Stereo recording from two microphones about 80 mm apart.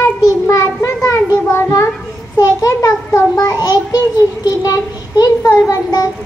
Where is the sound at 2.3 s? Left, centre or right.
Left.